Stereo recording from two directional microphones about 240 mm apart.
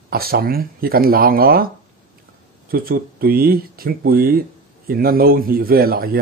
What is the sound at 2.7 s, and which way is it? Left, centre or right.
Speech, right.